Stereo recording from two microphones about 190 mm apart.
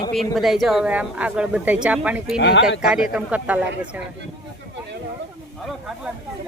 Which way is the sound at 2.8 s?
5° right (ahead or behind).